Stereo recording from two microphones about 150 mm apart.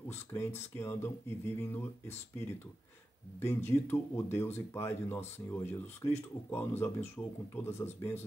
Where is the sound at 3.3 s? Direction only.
15° left (ahead or behind).